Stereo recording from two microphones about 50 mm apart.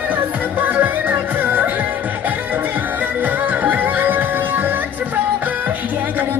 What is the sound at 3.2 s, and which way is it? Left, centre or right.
Music, right.